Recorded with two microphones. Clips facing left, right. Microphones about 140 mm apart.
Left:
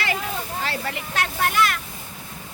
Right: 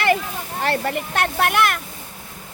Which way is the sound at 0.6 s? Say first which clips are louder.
Right 11 dB; 55° right (ahead or behind).